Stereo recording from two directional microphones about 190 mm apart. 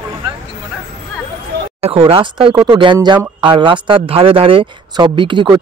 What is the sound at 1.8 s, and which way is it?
Speech, 30° right (ahead or behind).